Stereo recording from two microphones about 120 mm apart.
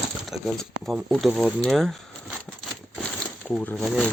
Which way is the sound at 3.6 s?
15° left (ahead or behind).